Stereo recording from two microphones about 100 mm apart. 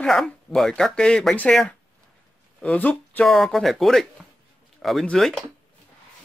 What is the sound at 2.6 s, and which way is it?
Speech, 15° left (ahead or behind).